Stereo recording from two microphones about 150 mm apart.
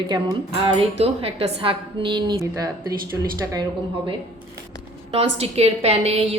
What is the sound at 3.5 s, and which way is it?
Speech, 25° right (ahead or behind).